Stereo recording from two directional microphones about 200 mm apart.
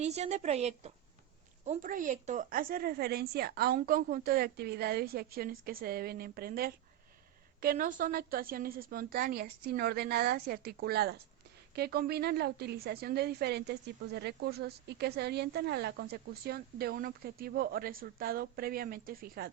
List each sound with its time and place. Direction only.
0.0 s a woman's voice: 35° right (ahead or behind)